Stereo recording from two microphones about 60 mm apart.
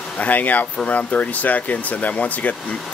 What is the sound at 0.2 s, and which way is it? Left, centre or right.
Speech, left.